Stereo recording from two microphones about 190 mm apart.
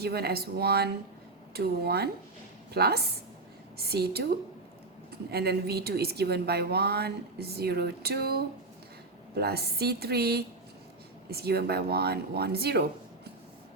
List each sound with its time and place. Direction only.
0.0 s a woman's voice: 55° right (ahead or behind)
5.3 s a woman's voice: 55° right (ahead or behind)